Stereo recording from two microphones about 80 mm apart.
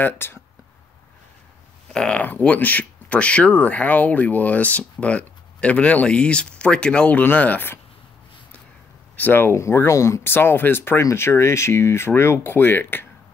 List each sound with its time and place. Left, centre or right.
0.0 s speech: left
1.9 s speech: centre
9.1 s speech: left